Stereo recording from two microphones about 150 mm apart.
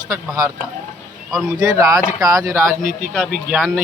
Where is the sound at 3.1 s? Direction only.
5° left (ahead or behind).